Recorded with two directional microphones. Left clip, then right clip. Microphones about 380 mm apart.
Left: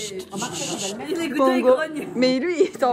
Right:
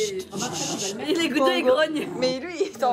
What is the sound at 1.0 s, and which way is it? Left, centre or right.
Speech, centre.